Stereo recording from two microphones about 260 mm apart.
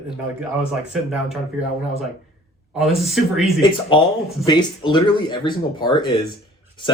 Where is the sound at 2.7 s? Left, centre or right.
Centre.